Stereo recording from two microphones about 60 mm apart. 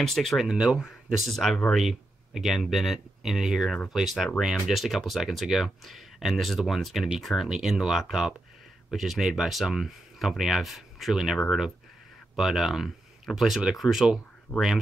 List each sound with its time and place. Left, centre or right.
0.0 s speech: centre
0.5 s speech: centre
11.3 s speech: centre
14.5 s speech: left